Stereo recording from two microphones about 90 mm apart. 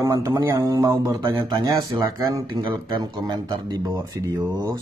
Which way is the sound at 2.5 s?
60° right (ahead or behind).